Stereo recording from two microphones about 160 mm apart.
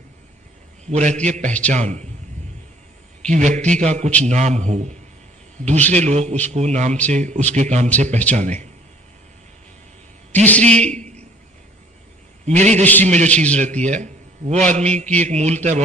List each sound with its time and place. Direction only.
0.9 s a man's voice: 45° right (ahead or behind)
3.2 s a man's voice: 50° right (ahead or behind)
10.6 s a man's voice: 45° right (ahead or behind)
12.5 s a man's voice: 45° right (ahead or behind)
12.8 s a man's voice: 10° left (ahead or behind)
13.1 s a man's voice: 45° right (ahead or behind)